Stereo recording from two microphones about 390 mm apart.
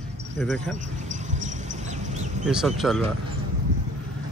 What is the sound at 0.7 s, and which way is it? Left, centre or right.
Cricket, centre.